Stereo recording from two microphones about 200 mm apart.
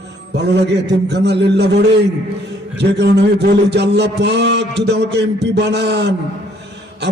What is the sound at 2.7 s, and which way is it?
A man's voice, 60° right (ahead or behind).